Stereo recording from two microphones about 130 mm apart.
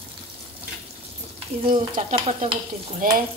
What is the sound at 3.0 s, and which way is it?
Speech, 90° right.